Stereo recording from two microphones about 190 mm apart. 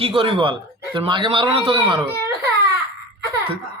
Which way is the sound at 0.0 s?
25° right (ahead or behind).